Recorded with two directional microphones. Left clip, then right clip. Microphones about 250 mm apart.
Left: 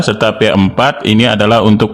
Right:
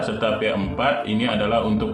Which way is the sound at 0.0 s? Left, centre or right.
Left.